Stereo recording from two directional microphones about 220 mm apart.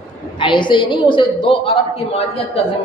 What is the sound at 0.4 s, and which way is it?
A woman's voice, 20° left (ahead or behind).